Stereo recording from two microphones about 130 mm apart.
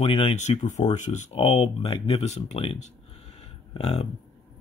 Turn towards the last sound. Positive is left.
turn(degrees=55)  # may be behind; listen again after turning